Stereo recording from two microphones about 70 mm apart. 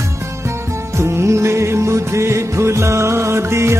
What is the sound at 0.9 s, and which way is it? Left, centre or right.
Music, right.